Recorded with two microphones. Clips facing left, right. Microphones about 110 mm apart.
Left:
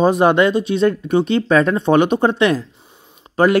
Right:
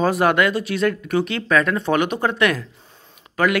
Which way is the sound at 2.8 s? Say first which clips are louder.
Left 2 dB; 15° left (ahead or behind).